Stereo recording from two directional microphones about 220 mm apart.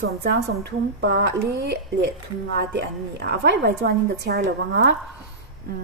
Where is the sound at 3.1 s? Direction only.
50° right (ahead or behind).